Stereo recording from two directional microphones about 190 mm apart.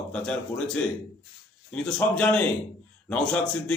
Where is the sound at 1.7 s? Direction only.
5° left (ahead or behind).